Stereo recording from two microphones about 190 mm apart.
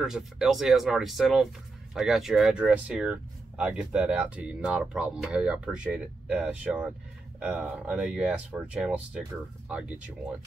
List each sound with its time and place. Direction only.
0.0 s speech: centre (ahead or behind)